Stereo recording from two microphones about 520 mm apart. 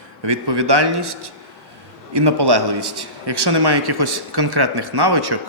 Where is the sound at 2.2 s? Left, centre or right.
Right.